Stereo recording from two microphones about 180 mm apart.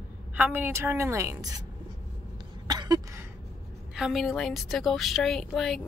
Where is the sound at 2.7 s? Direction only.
20° right (ahead or behind).